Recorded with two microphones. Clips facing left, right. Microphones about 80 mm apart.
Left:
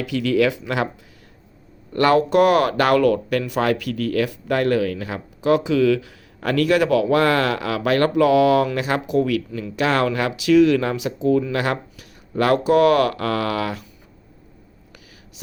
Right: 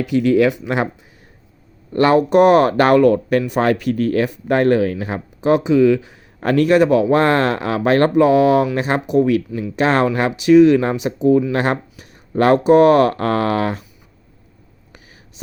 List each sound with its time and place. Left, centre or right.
0.1 s speech: right
1.9 s speech: right